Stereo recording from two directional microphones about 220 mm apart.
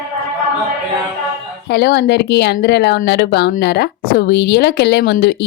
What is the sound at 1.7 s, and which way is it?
Speech, 50° left (ahead or behind).